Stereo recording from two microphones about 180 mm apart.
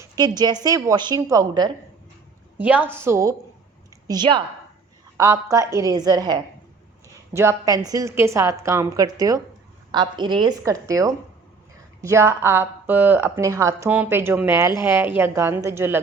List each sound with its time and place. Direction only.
0.0 s a woman's voice: 20° right (ahead or behind)
2.6 s a woman's voice: 10° right (ahead or behind)